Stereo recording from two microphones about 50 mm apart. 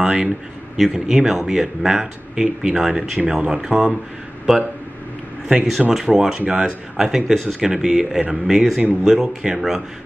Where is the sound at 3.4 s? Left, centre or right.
Centre.